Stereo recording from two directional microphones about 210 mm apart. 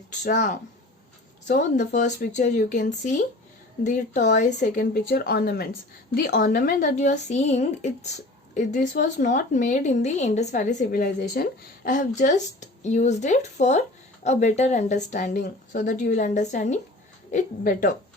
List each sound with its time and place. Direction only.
0.3 s a woman's voice: 40° left (ahead or behind)